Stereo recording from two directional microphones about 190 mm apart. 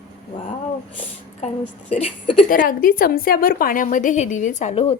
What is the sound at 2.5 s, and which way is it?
A woman's voice, 45° left (ahead or behind).